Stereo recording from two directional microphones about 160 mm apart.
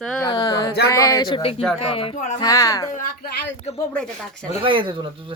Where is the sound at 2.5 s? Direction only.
20° left (ahead or behind).